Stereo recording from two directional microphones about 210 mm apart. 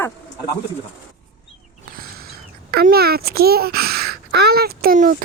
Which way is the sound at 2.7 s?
50° right (ahead or behind).